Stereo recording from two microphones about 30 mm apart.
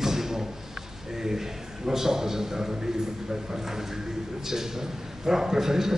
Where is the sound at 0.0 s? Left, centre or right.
Centre.